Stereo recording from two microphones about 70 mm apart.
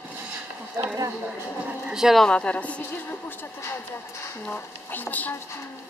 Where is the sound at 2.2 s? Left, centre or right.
Centre.